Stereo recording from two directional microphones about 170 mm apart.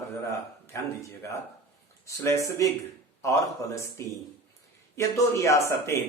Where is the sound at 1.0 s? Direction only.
20° left (ahead or behind).